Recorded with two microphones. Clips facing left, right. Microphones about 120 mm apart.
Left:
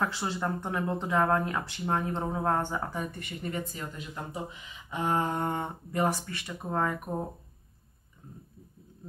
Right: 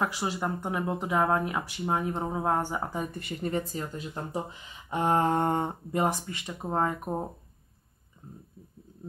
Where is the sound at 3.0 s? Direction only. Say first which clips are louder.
Right 3 dB; 30° right (ahead or behind).